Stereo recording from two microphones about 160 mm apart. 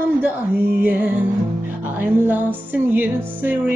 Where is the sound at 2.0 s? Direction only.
10° right (ahead or behind).